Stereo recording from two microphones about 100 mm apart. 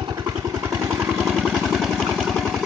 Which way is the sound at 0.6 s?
30° right (ahead or behind).